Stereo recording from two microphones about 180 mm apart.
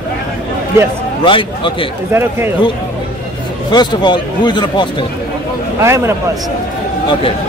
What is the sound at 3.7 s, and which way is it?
A man's voice, 25° left (ahead or behind).